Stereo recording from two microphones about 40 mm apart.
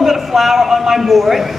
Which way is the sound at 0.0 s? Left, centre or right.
Centre.